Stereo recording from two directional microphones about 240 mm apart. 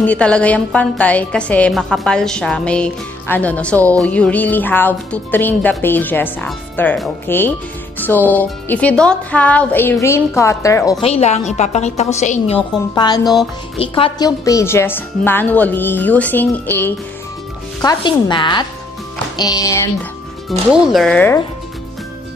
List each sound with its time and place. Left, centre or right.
0.0 s a woman's voice: centre
11.0 s a woman's voice: left
12.9 s speech: centre
13.2 s a woman's voice: centre
13.7 s speech: left
17.8 s a woman's voice: centre
20.7 s a woman's voice: centre